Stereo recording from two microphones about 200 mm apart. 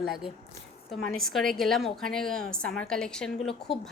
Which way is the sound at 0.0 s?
Centre (ahead or behind).